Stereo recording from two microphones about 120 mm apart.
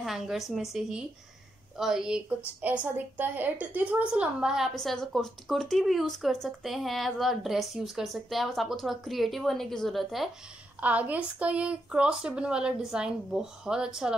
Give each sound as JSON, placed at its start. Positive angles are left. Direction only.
{"t": 0.0, "sound": "a woman's voice", "side_deg": 0}
{"t": 10.8, "sound": "a woman's voice", "side_deg": -10}